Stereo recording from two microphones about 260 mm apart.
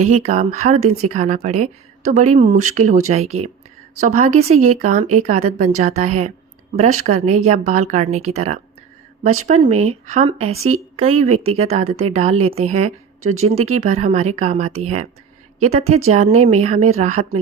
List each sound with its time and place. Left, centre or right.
0.1 s speech: right
3.2 s speech: right
4.0 s speech: right
9.6 s speech: right